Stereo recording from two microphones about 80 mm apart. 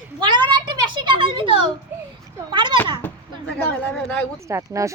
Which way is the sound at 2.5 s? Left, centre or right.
Right.